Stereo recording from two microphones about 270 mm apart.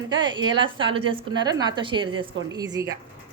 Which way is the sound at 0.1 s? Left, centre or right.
Centre.